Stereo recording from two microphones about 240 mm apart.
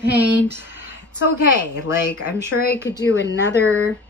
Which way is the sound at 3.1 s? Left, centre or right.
Left.